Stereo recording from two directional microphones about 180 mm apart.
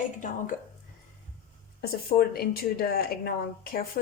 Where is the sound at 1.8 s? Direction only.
55° left (ahead or behind).